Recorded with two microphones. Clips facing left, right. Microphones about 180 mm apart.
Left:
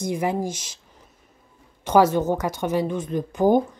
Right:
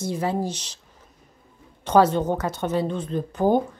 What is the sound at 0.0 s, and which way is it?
Speech, 15° left (ahead or behind).